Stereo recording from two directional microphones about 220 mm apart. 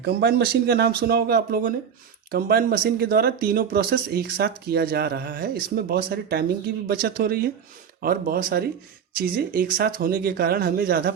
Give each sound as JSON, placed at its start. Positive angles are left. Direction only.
{"t": 0.0, "sound": "speech", "side_deg": -45}